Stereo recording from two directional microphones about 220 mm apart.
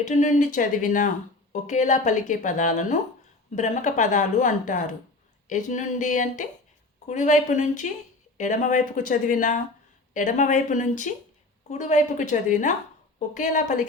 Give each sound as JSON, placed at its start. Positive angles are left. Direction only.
{"t": 0.0, "sound": "speech", "side_deg": 35}